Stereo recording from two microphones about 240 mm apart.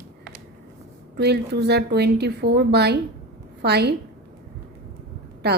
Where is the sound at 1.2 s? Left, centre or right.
Right.